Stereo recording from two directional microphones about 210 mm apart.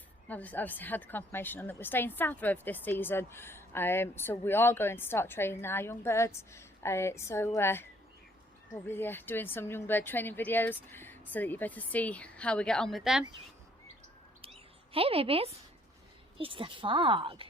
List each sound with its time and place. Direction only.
0.3 s a woman's voice: 5° left (ahead or behind)
14.9 s speech: 25° right (ahead or behind)